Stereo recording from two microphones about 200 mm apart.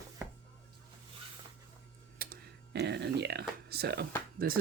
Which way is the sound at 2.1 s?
50° right (ahead or behind).